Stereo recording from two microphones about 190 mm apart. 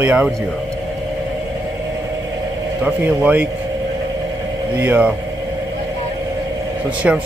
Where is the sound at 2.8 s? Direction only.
5° right (ahead or behind).